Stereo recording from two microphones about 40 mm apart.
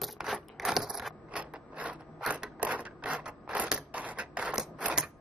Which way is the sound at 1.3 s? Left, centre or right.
Right.